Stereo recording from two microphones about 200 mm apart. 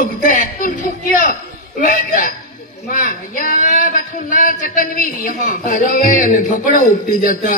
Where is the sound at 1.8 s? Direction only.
40° left (ahead or behind).